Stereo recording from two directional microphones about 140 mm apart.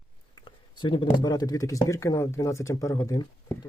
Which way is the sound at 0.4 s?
35° left (ahead or behind).